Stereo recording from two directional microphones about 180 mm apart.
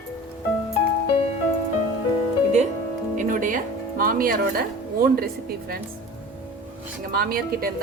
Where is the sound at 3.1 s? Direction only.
50° right (ahead or behind).